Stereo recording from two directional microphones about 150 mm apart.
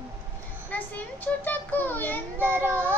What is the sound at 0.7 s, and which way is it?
Child singing, 10° left (ahead or behind).